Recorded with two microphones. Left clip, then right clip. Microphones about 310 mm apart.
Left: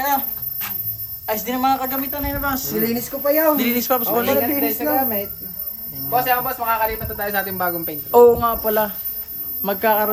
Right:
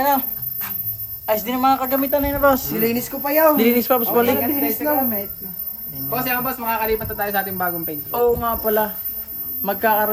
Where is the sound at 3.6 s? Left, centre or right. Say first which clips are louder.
Right 3 dB; centre.